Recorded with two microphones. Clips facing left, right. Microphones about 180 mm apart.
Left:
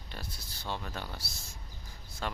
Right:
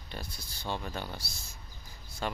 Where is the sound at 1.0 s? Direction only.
Centre (ahead or behind).